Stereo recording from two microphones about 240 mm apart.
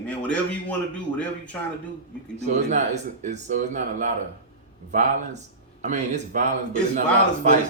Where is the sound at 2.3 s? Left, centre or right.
Right.